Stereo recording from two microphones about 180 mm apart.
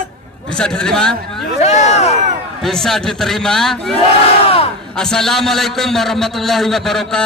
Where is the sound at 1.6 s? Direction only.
40° left (ahead or behind).